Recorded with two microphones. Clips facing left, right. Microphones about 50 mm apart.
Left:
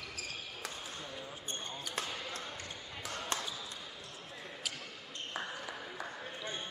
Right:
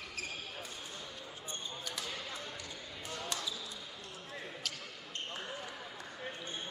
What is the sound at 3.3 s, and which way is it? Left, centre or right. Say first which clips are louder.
Basketball bounce: left 5 dB; left.